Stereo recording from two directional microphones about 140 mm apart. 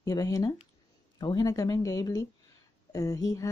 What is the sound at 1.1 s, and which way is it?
Speech, 25° left (ahead or behind).